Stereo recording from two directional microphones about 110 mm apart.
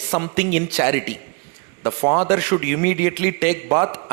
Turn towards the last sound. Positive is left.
turn(degrees=-25)  # may be behind; listen again after turning